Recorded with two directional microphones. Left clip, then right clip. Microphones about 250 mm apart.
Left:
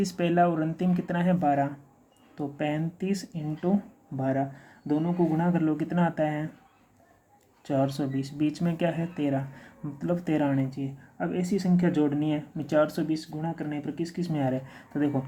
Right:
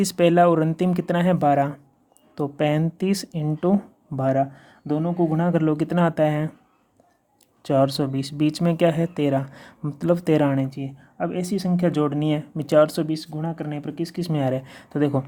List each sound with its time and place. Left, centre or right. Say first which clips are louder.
0.0 s speech: right 7 dB; right
7.6 s speech: right 8 dB; right